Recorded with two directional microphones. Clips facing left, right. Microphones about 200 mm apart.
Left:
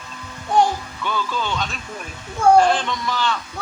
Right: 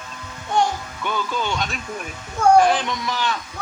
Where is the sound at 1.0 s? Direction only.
15° right (ahead or behind).